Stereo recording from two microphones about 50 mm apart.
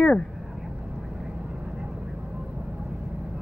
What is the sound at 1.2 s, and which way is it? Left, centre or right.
Vehicle, centre.